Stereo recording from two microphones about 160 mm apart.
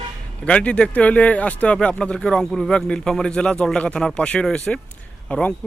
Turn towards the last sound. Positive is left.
turn(degrees=5)  # may be behind; listen again after turning